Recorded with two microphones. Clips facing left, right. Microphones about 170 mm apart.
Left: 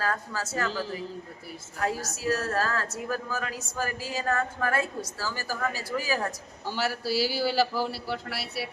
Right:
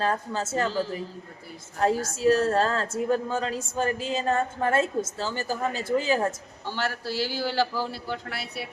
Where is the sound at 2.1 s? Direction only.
25° right (ahead or behind).